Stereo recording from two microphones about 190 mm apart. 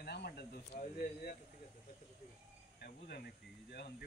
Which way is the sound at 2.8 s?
55° left (ahead or behind).